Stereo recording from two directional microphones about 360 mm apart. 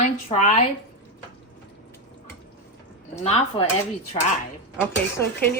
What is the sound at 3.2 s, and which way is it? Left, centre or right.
Speech, centre.